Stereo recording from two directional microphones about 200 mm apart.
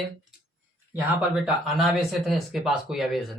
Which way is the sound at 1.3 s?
Centre (ahead or behind).